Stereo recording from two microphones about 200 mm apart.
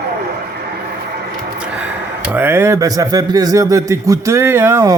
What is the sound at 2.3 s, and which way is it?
Speech, 10° right (ahead or behind).